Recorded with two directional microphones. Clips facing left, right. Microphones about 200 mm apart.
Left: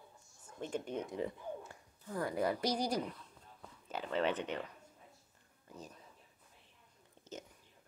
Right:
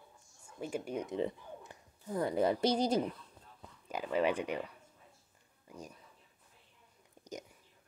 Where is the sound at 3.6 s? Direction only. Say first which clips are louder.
Right 3 dB; 10° right (ahead or behind).